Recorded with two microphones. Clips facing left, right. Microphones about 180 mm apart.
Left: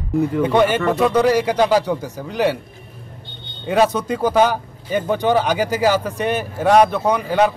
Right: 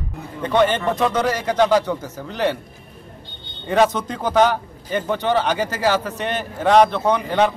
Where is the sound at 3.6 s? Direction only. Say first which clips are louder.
Left 1 dB; 10° left (ahead or behind).